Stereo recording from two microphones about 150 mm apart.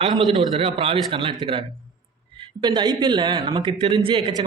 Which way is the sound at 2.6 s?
30° right (ahead or behind).